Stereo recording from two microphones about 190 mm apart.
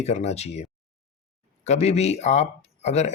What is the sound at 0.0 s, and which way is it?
Speech, 35° left (ahead or behind).